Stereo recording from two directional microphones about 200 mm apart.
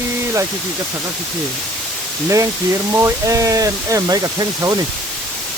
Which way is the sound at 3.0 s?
15° right (ahead or behind).